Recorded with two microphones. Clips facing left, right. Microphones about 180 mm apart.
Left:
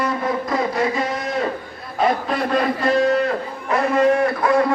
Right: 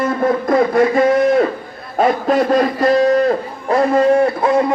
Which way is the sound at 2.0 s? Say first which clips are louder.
Right 6 dB; 45° right (ahead or behind).